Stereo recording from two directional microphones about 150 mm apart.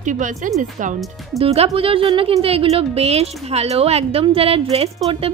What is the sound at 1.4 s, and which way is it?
A woman's voice, 40° right (ahead or behind).